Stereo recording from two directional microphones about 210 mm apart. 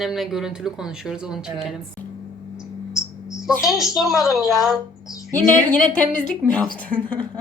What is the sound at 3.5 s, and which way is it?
A woman's voice, centre (ahead or behind).